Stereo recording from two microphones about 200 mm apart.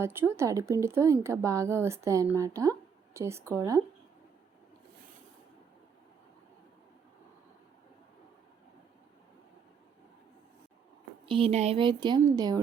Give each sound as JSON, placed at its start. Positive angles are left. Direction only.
{"t": 0.0, "sound": "speech", "side_deg": -10}
{"t": 11.3, "sound": "speech", "side_deg": -30}